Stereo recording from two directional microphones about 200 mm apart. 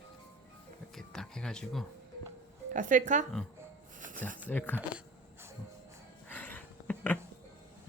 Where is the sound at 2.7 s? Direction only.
40° right (ahead or behind).